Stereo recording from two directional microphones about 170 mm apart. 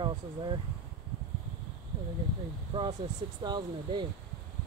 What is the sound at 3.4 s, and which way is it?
Speech, 25° right (ahead or behind).